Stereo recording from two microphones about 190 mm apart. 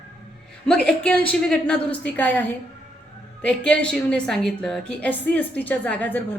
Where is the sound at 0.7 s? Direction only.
5° left (ahead or behind).